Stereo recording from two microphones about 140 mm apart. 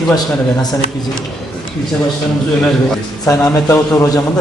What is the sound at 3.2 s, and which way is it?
Speech, 25° left (ahead or behind).